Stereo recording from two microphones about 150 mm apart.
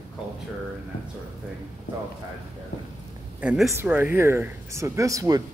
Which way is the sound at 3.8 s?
15° right (ahead or behind).